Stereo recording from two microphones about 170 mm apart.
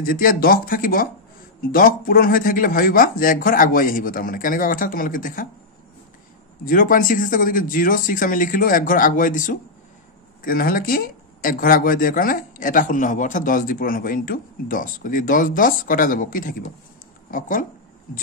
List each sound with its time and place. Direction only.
0.0 s speech: 60° left (ahead or behind)
6.6 s speech: 55° left (ahead or behind)